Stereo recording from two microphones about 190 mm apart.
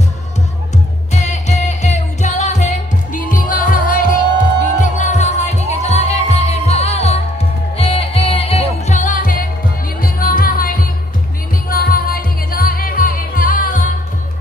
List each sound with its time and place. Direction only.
1.1 s music: 35° left (ahead or behind)